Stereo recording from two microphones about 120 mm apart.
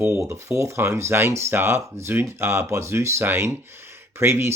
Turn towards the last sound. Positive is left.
turn(degrees=-20)  # may be behind; listen again after turning